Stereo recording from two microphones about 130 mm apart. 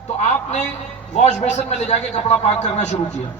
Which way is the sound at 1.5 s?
60° left (ahead or behind).